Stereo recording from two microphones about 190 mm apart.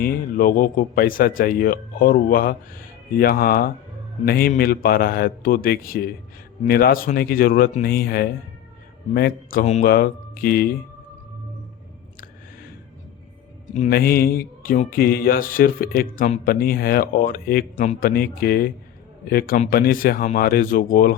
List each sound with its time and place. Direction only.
0.0 s speech: 45° left (ahead or behind)
13.7 s speech: 45° left (ahead or behind)